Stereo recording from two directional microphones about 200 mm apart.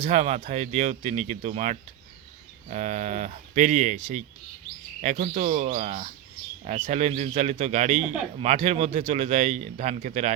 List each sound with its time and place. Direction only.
0.1 s speech: 35° right (ahead or behind)